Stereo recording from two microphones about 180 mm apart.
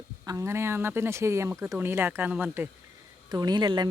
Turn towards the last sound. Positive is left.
turn(degrees=-25)  # may be behind; listen again after turning